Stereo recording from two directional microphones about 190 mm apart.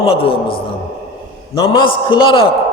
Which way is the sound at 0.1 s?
30° left (ahead or behind).